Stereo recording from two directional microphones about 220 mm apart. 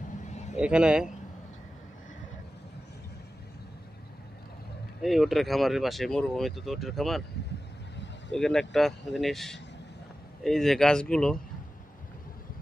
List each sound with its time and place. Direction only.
0.3 s vehicle: 30° left (ahead or behind)
0.6 s speech: 5° right (ahead or behind)
5.0 s speech: centre (ahead or behind)
8.3 s speech: centre (ahead or behind)